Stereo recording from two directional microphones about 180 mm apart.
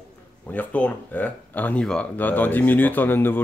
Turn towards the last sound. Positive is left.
turn(degrees=10)  # may be behind; listen again after turning